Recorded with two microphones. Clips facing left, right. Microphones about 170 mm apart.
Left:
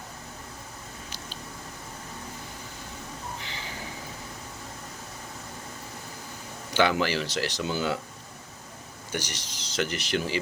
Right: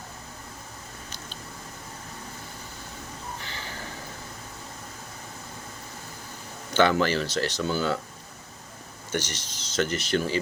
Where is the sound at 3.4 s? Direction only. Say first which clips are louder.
Even; 15° left (ahead or behind).